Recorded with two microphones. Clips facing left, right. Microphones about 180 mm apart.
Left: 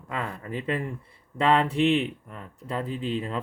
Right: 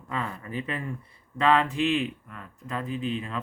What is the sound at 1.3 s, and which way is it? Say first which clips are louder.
Speech: left 1 dB; 30° left (ahead or behind).